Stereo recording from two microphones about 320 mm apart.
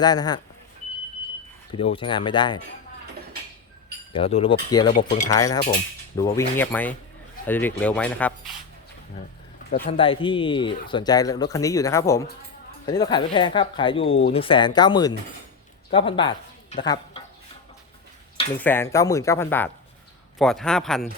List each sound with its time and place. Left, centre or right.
0.0 s speech: centre
1.8 s speech: centre
4.1 s speech: centre
4.9 s speech: left
5.3 s speech: centre
9.6 s speech: left
10.0 s speech: centre
18.6 s speech: centre